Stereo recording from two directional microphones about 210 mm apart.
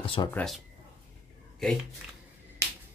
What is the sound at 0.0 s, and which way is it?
Speech, 25° left (ahead or behind).